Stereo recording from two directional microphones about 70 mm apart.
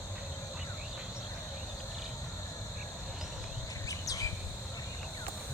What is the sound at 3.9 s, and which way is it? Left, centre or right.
Bird, left.